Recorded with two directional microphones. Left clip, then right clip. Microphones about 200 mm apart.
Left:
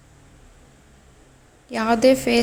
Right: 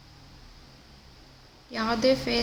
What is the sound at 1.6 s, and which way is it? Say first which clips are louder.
Speech: left 7 dB; 30° left (ahead or behind).